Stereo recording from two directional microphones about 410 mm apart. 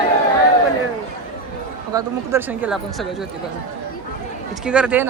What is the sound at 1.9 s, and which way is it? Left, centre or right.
Speech, centre.